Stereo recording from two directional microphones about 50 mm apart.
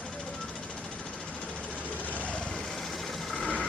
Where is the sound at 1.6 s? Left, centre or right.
Left.